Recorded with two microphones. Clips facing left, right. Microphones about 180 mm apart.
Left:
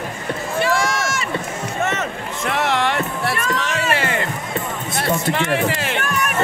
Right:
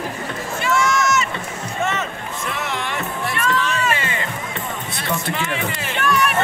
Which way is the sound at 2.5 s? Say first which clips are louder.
Left 9 dB; 70° left (ahead or behind).